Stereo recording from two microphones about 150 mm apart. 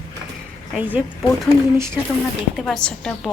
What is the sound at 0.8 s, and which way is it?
Speech, 10° right (ahead or behind).